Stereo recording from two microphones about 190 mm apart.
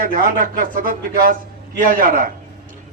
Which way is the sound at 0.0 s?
45° right (ahead or behind).